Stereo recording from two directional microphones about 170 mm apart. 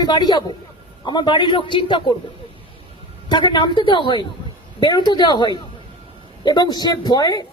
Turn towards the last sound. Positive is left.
turn(degrees=25)  # may be behind; listen again after turning